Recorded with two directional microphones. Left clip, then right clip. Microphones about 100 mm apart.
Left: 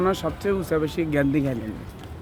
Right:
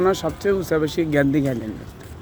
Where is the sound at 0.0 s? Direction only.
30° right (ahead or behind).